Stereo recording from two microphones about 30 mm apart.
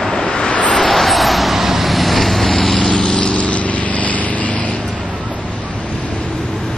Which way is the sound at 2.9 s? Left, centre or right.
Left.